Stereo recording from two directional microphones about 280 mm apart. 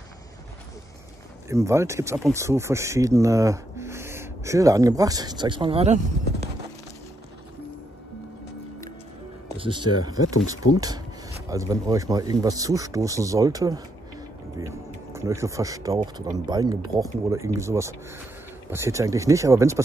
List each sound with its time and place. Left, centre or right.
1.5 s speech: centre
9.6 s speech: centre
10.2 s speech: left
10.5 s speech: centre
15.1 s speech: centre